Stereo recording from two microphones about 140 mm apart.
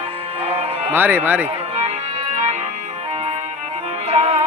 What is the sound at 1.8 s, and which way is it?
Music, 50° right (ahead or behind).